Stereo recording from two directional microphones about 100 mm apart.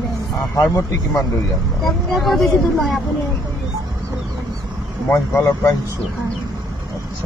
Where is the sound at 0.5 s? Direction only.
30° left (ahead or behind).